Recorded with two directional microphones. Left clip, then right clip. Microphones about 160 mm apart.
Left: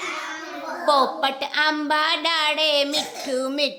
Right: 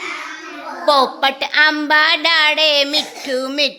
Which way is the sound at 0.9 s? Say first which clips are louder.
Right 5 dB; 20° right (ahead or behind).